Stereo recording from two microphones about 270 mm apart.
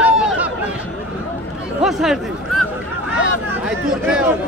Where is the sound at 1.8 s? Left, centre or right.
Centre.